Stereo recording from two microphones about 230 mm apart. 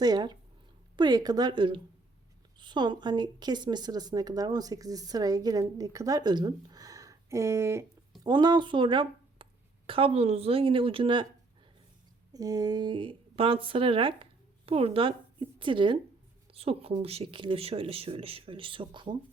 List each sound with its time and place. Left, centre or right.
0.0 s a woman's voice: centre
12.3 s a woman's voice: centre